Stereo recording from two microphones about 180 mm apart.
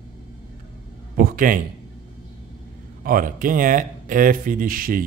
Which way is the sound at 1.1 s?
50° right (ahead or behind).